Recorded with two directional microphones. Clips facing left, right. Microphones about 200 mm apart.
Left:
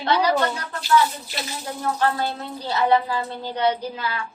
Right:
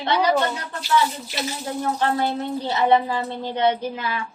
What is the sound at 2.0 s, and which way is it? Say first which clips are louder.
A woman's voice: right 1 dB; 20° right (ahead or behind).